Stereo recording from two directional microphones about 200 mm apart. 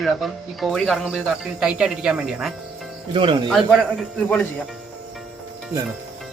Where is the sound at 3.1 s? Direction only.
25° right (ahead or behind).